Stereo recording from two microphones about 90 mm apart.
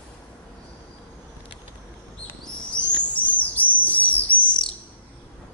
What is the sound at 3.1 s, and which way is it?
Chirp, 15° left (ahead or behind).